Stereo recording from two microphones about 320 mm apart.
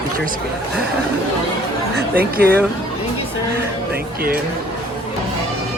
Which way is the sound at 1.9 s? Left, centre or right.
Right.